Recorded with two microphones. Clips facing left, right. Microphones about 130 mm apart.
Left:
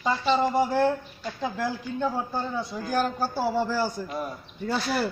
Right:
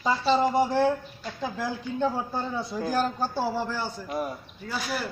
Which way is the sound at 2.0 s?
Centre (ahead or behind).